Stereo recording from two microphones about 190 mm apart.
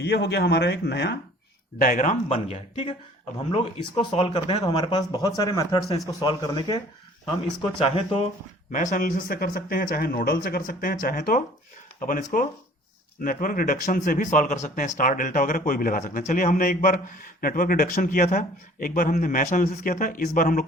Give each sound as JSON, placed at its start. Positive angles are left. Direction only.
{"t": 0.0, "sound": "speech", "side_deg": 60}
{"t": 1.8, "sound": "speech", "side_deg": 45}
{"t": 7.8, "sound": "speech", "side_deg": 30}
{"t": 8.7, "sound": "speech", "side_deg": 40}